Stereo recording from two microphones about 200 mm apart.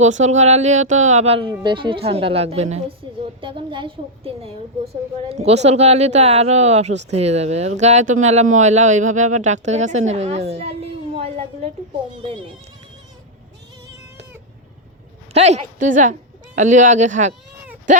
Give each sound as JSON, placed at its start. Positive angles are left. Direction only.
{"t": 0.0, "sound": "a woman's voice", "side_deg": -35}
{"t": 15.3, "sound": "a woman's voice", "side_deg": -35}